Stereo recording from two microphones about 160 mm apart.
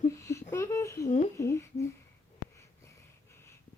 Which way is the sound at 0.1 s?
20° left (ahead or behind).